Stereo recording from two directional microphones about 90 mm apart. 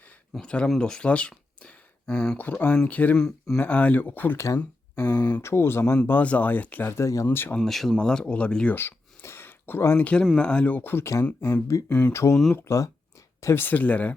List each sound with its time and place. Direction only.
0.3 s speech: 10° left (ahead or behind)
2.4 s speech: 20° left (ahead or behind)
3.2 s speech: 5° left (ahead or behind)
3.6 s speech: 15° left (ahead or behind)
4.4 s a sound: 35° left (ahead or behind)
5.2 s speech: 25° left (ahead or behind)
7.3 s speech: 20° left (ahead or behind)
7.6 s speech: 5° left (ahead or behind)
8.7 s a sound: 25° left (ahead or behind)
10.0 s speech: 15° left (ahead or behind); by 11.9 s 40° left (ahead or behind)
11.9 s speech: 15° left (ahead or behind)
12.1 s speech: 30° left (ahead or behind); by 14.1 s 15° left (ahead or behind)